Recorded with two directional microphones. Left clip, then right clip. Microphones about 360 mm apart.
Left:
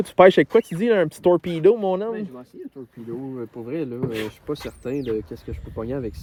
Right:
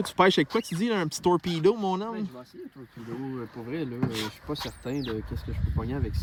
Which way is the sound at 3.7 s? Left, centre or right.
Centre.